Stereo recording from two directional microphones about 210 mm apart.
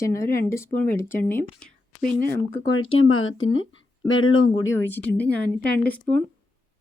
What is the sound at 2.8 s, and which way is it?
Speech, 75° left (ahead or behind).